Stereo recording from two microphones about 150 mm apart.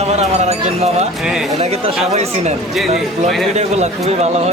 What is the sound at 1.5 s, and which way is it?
Speech, 45° right (ahead or behind).